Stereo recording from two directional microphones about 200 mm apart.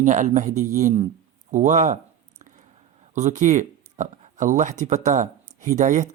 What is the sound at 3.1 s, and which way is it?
Speech, 35° right (ahead or behind).